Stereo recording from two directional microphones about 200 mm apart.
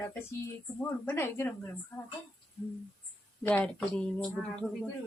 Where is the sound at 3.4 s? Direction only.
5° left (ahead or behind).